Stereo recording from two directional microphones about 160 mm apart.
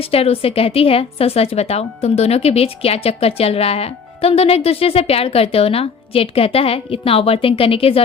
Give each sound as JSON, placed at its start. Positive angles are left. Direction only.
{"t": 0.0, "sound": "a woman's voice", "side_deg": 35}